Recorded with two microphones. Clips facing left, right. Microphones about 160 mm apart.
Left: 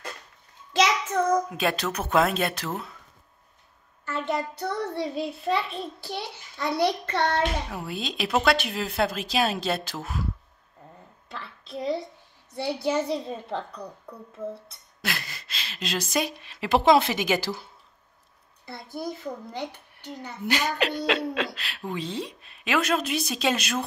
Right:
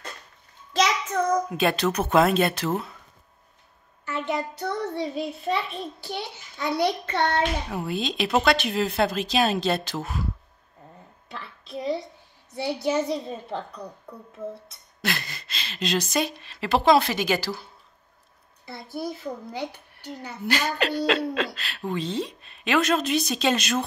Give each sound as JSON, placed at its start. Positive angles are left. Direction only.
{"t": 1.1, "sound": "a child's voice", "side_deg": 0}
{"t": 4.6, "sound": "a child's voice", "side_deg": 0}
{"t": 11.7, "sound": "a child's voice", "side_deg": 0}
{"t": 15.0, "sound": "a woman's voice", "side_deg": 5}
{"t": 18.7, "sound": "a child's voice", "side_deg": 0}
{"t": 20.4, "sound": "a woman's voice", "side_deg": 15}